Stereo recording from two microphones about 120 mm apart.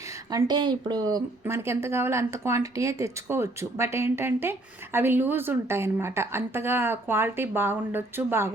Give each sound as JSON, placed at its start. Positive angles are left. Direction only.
{"t": 0.3, "sound": "speech", "side_deg": -35}
{"t": 1.5, "sound": "speech", "side_deg": -20}